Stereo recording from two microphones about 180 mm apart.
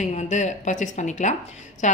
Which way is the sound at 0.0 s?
40° left (ahead or behind).